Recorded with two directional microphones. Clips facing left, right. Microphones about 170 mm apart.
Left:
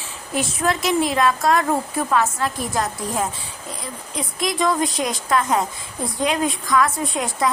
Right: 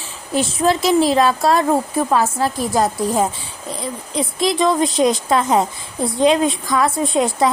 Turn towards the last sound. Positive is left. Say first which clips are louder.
# right 6 dB
turn(degrees=-30)  # may be behind; listen again after turning